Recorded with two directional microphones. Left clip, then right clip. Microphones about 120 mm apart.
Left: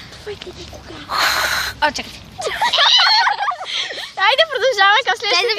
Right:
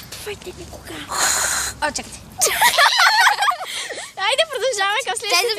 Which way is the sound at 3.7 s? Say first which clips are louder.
Left 5 dB; 20° right (ahead or behind).